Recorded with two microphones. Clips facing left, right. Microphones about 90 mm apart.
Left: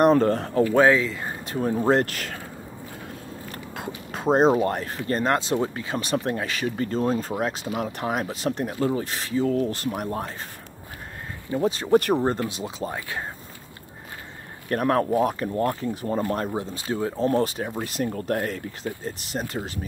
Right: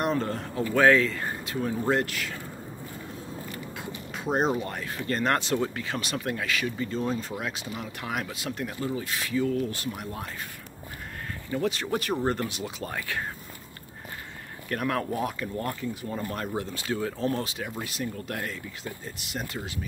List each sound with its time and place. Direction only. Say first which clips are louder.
0.0 s speech: left 10 dB; 50° left (ahead or behind)
0.7 s speech: even; 20° left (ahead or behind)
1.4 s speech: left 6 dB; 40° left (ahead or behind)
3.5 s biting: left 3 dB; 45° left (ahead or behind)
4.3 s speech: left 8 dB; 35° left (ahead or behind)
4.9 s speech: right 2 dB; 25° left (ahead or behind)
6.8 s speech: left 5 dB; 45° left (ahead or behind)
11.6 s speech: left 9 dB; 30° left (ahead or behind)
14.7 s speech: left 7 dB; 35° left (ahead or behind)
16.5 s speech: left 3 dB; 25° left (ahead or behind)
17.3 s speech: left 7 dB; 45° left (ahead or behind)